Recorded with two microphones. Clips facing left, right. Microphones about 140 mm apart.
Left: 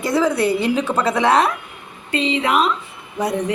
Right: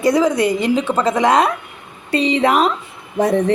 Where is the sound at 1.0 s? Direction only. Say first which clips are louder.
Right 1 dB; 5° left (ahead or behind).